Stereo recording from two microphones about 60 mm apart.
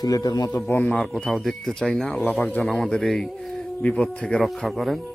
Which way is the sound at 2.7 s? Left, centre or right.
Centre.